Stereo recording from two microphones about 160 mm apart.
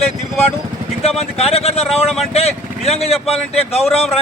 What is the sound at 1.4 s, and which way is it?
A man's voice, 40° left (ahead or behind).